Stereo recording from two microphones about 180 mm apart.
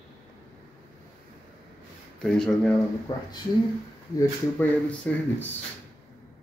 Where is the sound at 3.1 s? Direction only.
25° left (ahead or behind).